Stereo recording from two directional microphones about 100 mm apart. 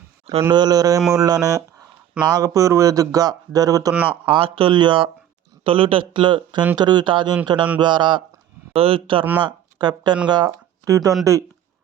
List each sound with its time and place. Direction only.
0.5 s speech: 40° right (ahead or behind)
3.9 s speech: 10° right (ahead or behind)
4.3 s speech: 65° right (ahead or behind)
8.7 s speech: 70° right (ahead or behind)
9.4 s speech: 50° right (ahead or behind)
10.8 s speech: 30° right (ahead or behind)